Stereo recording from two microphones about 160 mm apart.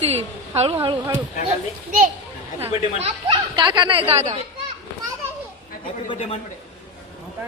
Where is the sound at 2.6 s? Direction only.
40° right (ahead or behind).